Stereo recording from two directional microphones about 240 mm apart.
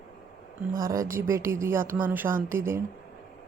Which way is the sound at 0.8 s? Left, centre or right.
Centre.